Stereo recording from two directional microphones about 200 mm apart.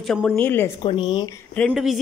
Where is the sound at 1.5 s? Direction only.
Centre (ahead or behind).